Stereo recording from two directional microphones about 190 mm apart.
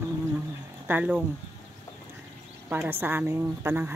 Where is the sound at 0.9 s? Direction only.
10° right (ahead or behind).